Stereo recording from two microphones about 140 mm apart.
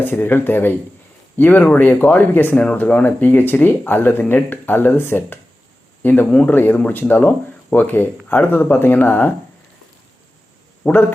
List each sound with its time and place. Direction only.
0.0 s speech: 15° left (ahead or behind)
10.8 s speech: 15° left (ahead or behind)